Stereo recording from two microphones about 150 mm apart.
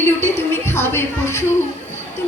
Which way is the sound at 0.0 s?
15° left (ahead or behind).